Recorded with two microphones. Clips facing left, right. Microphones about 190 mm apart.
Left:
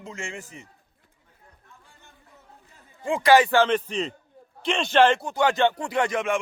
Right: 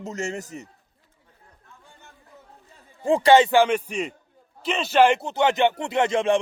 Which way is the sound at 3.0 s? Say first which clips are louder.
Right 2 dB; 35° right (ahead or behind).